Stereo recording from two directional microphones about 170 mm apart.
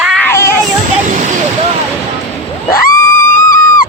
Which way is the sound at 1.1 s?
45° right (ahead or behind).